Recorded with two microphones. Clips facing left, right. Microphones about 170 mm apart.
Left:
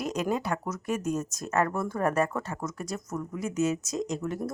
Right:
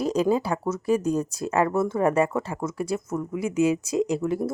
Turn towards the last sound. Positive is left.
turn(degrees=-30)  # may be behind; listen again after turning